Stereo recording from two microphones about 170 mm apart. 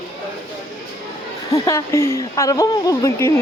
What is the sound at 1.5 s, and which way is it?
Speech, 15° left (ahead or behind).